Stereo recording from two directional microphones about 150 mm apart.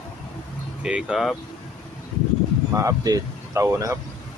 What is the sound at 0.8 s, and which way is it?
Speech, 5° right (ahead or behind).